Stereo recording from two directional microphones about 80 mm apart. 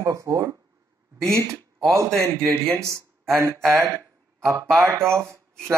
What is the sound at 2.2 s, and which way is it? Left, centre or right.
Speech, centre.